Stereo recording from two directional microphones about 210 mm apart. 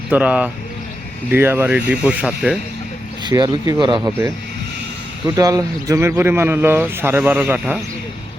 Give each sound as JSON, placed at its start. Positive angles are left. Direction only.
{"t": 0.1, "sound": "speech", "side_deg": -5}
{"t": 3.2, "sound": "speech", "side_deg": -15}
{"t": 5.4, "sound": "speech", "side_deg": -15}